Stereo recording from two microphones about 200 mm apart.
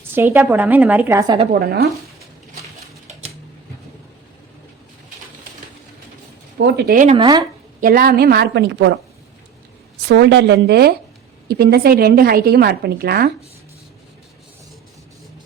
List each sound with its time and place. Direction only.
0.1 s a woman's voice: 10° right (ahead or behind)
1.5 s a woman's voice: 50° right (ahead or behind)
6.6 s a woman's voice: 55° right (ahead or behind)
7.2 s speech: 20° right (ahead or behind)
7.8 s a woman's voice: 45° right (ahead or behind); by 9.0 s 60° right (ahead or behind)
10.1 s a woman's voice: 60° right (ahead or behind)